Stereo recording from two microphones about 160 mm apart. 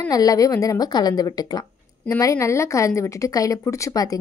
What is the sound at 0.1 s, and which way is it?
A woman's voice, 20° left (ahead or behind).